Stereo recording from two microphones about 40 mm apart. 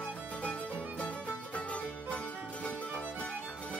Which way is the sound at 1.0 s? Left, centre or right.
Left.